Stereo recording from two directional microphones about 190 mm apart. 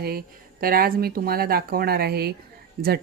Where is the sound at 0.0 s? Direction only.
50° right (ahead or behind).